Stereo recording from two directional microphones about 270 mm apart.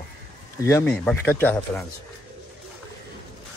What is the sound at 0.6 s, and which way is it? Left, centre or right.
Speech, centre.